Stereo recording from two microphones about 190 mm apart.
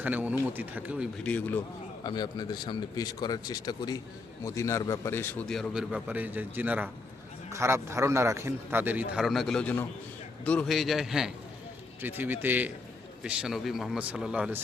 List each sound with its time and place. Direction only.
0.0 s a man's voice: 10° right (ahead or behind)
1.2 s speech: 10° left (ahead or behind)
2.0 s a man's voice: 20° left (ahead or behind); by 14.6 s 5° right (ahead or behind)